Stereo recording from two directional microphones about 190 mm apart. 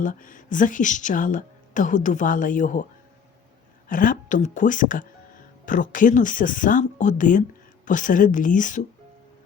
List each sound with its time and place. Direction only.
0.0 s speech: 45° left (ahead or behind)
3.8 s speech: 45° left (ahead or behind)